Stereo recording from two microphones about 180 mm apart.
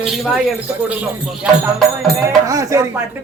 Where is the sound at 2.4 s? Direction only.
20° right (ahead or behind).